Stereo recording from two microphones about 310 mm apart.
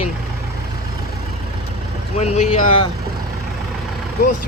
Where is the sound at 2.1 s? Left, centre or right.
Left.